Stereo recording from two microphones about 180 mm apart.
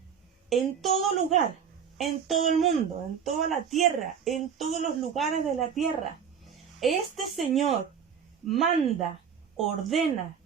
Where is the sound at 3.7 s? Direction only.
Centre (ahead or behind).